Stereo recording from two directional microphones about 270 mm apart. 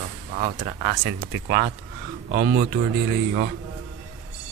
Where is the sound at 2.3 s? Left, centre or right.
Right.